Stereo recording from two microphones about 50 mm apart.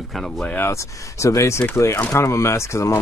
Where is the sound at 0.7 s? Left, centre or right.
Left.